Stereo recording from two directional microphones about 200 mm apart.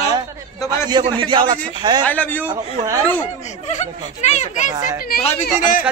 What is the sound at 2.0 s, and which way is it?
Speech, 10° left (ahead or behind).